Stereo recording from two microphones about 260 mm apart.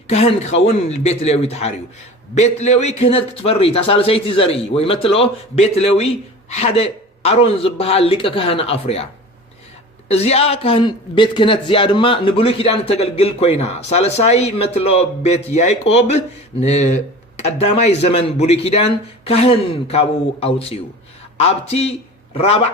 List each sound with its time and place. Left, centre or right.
0.1 s a man's voice: left
10.1 s a man's voice: left